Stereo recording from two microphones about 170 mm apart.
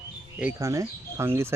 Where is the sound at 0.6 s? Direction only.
20° right (ahead or behind).